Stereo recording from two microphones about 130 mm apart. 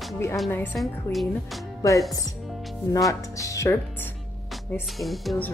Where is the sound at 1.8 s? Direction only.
25° left (ahead or behind).